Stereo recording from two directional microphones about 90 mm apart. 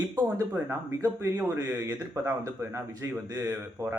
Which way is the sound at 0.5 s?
30° right (ahead or behind).